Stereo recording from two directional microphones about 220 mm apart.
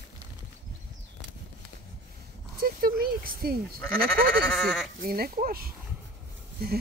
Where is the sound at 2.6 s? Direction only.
40° right (ahead or behind).